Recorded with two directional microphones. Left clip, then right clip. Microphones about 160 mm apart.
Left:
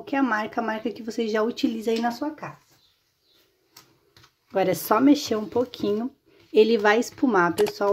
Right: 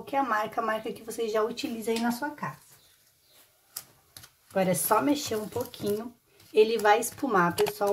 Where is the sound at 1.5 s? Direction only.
50° left (ahead or behind).